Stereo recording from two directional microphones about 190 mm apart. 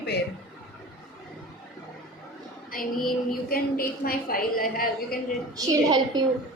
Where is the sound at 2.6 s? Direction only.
50° left (ahead or behind).